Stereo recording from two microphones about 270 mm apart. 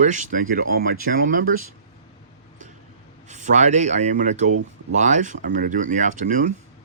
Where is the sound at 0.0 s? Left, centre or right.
Right.